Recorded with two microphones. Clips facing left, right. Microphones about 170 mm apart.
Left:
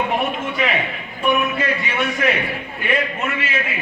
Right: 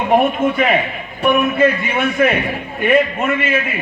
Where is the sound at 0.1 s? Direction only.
50° right (ahead or behind).